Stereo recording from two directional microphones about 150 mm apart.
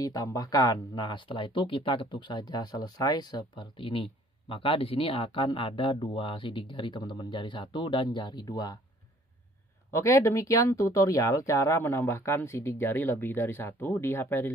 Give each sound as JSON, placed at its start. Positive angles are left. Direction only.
{"t": 0.0, "sound": "speech", "side_deg": 25}
{"t": 9.9, "sound": "speech", "side_deg": 20}